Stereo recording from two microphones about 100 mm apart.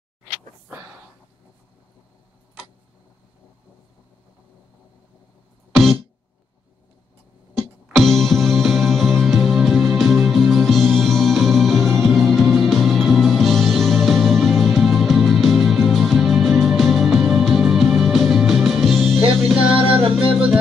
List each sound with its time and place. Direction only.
5.7 s music: centre (ahead or behind)
7.5 s music: centre (ahead or behind)
19.7 s music: 70° right (ahead or behind)